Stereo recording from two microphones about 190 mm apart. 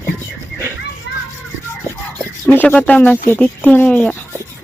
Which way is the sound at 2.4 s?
10° left (ahead or behind).